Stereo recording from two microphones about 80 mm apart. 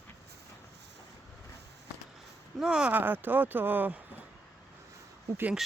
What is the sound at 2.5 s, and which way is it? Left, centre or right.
Speech, centre.